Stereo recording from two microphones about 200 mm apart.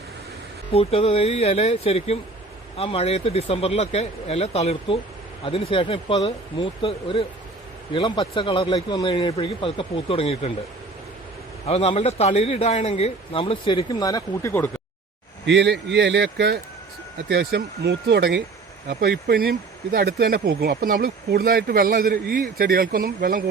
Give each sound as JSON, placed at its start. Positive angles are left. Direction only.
{"t": 0.7, "sound": "a man's voice", "side_deg": 30}
{"t": 11.6, "sound": "a man's voice", "side_deg": 30}
{"t": 15.4, "sound": "speech", "side_deg": -55}